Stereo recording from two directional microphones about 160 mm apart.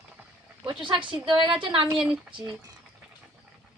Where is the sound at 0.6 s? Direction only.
30° right (ahead or behind).